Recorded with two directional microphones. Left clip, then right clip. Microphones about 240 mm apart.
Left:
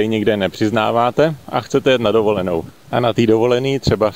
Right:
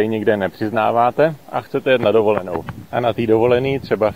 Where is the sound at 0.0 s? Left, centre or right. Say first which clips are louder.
Left 1 dB; left.